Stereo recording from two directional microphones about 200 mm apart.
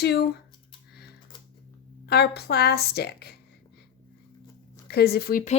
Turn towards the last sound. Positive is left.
turn(degrees=40)  # may be behind; listen again after turning